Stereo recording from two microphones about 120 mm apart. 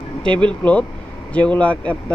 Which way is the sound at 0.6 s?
10° left (ahead or behind).